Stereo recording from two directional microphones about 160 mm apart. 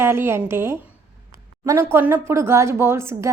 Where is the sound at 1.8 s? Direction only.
15° right (ahead or behind).